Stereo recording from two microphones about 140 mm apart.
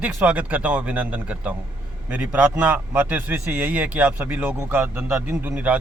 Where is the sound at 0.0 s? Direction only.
10° right (ahead or behind).